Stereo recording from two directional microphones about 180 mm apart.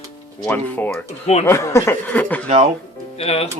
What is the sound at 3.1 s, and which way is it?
Speech, 35° left (ahead or behind).